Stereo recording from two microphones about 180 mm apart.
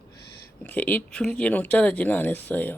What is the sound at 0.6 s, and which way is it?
Speech, 10° left (ahead or behind).